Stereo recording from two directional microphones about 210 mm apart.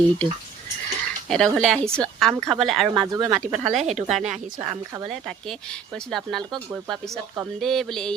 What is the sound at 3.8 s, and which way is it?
Speech, 30° right (ahead or behind).